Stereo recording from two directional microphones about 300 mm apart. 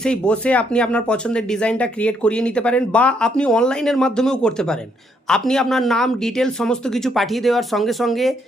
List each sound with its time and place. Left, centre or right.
0.0 s speech: centre